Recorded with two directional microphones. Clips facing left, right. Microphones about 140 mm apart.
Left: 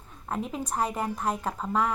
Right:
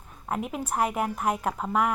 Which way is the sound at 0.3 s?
5° right (ahead or behind).